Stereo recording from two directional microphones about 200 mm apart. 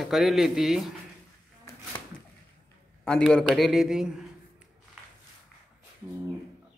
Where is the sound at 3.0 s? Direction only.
5° left (ahead or behind).